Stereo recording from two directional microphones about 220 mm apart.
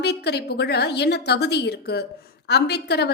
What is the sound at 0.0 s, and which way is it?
A woman's voice, 50° left (ahead or behind).